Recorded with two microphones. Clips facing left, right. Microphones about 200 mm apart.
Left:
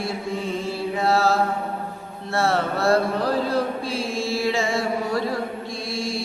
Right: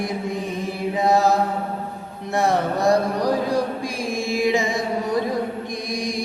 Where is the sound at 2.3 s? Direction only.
15° right (ahead or behind).